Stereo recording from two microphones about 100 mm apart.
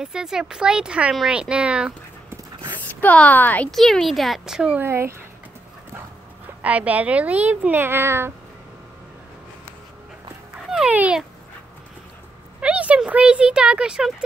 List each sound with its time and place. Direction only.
0.0 s speech: 5° right (ahead or behind)
2.9 s speech: 15° left (ahead or behind)
3.7 s speech: centre (ahead or behind)
4.7 s speech: 25° right (ahead or behind)
6.6 s speech: 15° right (ahead or behind)
10.9 s a sound: 15° right (ahead or behind)
12.5 s speech: 15° right (ahead or behind)